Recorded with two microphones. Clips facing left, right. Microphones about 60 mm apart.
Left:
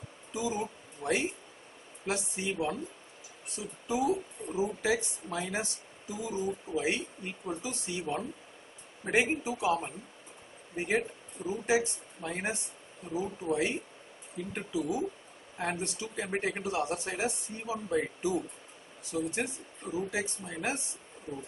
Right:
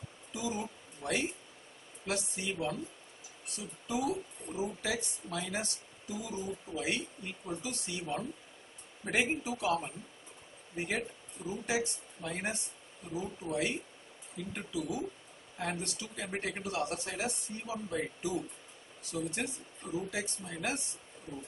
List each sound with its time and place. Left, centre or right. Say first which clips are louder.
0.3 s speech: left 4 dB; centre